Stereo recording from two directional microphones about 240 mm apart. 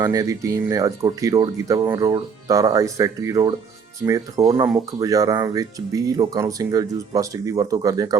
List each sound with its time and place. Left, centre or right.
0.0 s speech: centre